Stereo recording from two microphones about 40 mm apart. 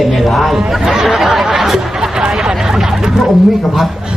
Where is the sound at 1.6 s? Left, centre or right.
Centre.